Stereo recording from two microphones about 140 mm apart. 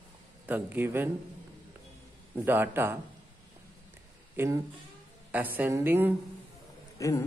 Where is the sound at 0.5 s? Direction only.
15° right (ahead or behind).